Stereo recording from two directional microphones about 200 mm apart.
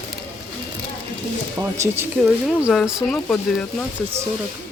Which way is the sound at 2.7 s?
Centre (ahead or behind).